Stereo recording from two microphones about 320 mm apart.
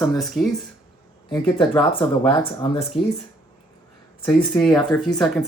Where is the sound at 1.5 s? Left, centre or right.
Centre.